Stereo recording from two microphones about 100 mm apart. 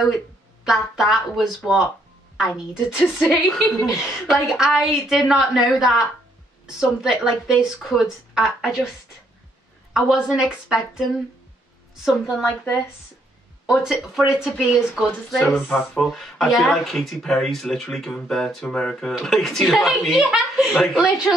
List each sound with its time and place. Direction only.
0.7 s speech: 5° right (ahead or behind)
9.9 s speech: 5° right (ahead or behind)
12.4 s a woman's voice: 25° left (ahead or behind)
13.7 s speech: 5° right (ahead or behind)